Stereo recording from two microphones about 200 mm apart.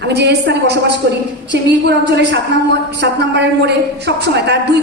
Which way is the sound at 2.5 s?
60° right (ahead or behind).